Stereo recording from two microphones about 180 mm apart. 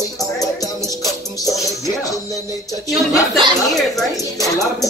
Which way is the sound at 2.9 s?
Centre (ahead or behind).